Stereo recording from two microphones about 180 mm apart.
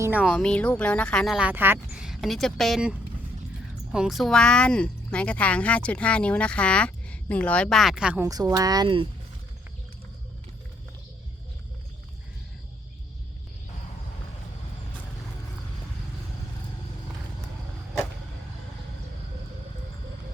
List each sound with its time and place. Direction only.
0.3 s speech: 5° left (ahead or behind)
8.2 s speech: 20° right (ahead or behind)